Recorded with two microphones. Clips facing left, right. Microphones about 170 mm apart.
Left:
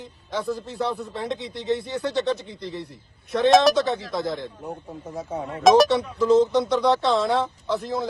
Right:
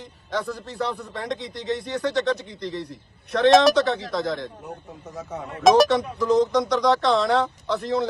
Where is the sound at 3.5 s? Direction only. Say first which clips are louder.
Right 1 dB; centre (ahead or behind).